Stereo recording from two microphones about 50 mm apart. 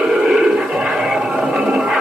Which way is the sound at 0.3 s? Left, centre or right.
Centre.